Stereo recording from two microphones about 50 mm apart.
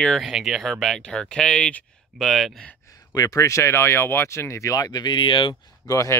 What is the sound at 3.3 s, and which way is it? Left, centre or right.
Speech, left.